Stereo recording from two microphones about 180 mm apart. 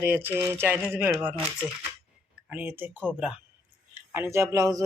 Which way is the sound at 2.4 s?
10° right (ahead or behind).